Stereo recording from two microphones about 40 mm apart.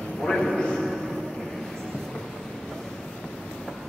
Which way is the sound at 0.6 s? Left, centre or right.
Left.